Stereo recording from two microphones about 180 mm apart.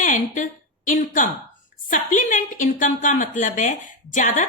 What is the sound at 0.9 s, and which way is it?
A woman's voice, 45° left (ahead or behind).